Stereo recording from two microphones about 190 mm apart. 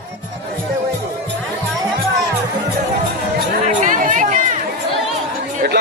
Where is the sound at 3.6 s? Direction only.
45° right (ahead or behind).